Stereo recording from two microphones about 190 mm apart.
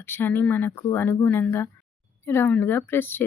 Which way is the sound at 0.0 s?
10° left (ahead or behind).